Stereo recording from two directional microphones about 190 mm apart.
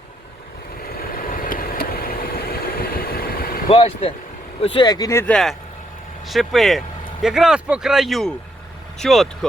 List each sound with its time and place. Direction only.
0.8 s vehicle: 50° left (ahead or behind)
3.7 s speech: 30° left (ahead or behind); by 9.5 s centre (ahead or behind)